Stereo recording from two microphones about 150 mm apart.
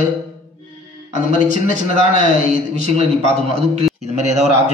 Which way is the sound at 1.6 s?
60° left (ahead or behind).